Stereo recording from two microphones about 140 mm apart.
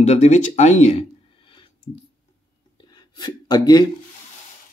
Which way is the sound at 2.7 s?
30° left (ahead or behind).